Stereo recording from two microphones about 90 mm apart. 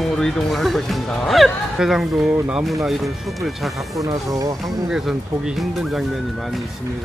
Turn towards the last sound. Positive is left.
turn(degrees=-5)  # may be behind; listen again after turning